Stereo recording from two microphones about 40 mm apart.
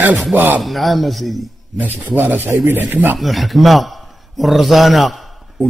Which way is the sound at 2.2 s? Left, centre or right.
Right.